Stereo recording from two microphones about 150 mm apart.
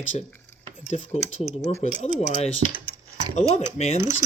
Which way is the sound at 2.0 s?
45° left (ahead or behind).